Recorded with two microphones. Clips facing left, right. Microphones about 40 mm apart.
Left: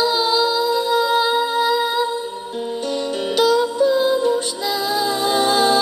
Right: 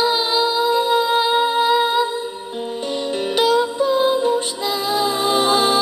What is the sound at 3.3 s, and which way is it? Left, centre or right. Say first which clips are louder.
Music: left 1 dB; right.